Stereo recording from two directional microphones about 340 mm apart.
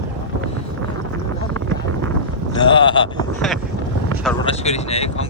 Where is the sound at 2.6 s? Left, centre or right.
Centre.